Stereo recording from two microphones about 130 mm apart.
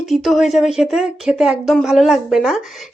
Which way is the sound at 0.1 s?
Centre (ahead or behind).